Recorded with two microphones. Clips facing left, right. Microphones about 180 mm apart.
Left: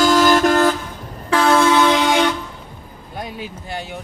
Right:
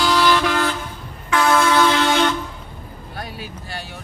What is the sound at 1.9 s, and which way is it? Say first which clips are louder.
Vehicle: left 2 dB; 15° left (ahead or behind).